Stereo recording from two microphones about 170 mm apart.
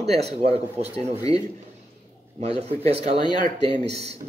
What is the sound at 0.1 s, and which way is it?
Speech, 40° right (ahead or behind).